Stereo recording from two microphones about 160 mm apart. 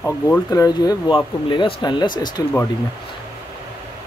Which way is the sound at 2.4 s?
20° left (ahead or behind).